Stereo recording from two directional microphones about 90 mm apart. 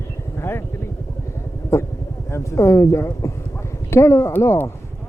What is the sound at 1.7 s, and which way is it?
Speech, 30° left (ahead or behind).